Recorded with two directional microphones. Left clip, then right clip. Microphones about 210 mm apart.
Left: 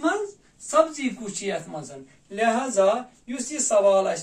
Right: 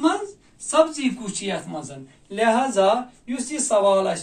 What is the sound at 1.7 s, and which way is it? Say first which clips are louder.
A man's voice: right 3 dB; 10° left (ahead or behind).